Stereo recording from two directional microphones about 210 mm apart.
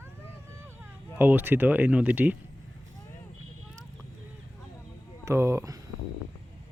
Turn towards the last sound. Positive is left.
turn(degrees=-15)  # may be behind; listen again after turning